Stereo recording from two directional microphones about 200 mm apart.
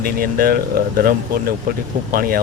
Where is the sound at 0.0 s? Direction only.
50° right (ahead or behind).